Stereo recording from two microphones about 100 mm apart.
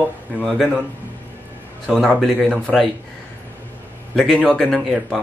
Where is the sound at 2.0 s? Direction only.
5° left (ahead or behind).